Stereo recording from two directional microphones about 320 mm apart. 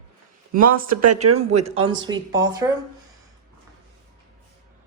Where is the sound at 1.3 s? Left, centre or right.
Centre.